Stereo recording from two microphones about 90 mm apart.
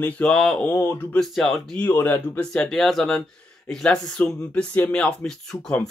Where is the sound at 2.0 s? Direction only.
20° left (ahead or behind).